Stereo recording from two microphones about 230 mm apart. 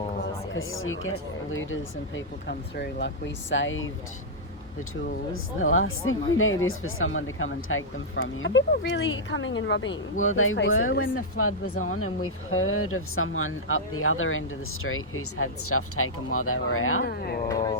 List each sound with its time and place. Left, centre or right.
0.5 s speech: left
5.5 s speech: left
17.0 s speech: left
17.5 s speech: centre